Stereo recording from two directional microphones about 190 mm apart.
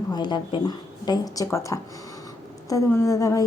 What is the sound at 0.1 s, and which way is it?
A woman's voice, 25° left (ahead or behind).